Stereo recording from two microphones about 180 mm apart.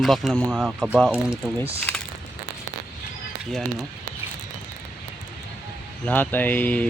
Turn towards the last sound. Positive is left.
turn(degrees=10)  # may be behind; listen again after turning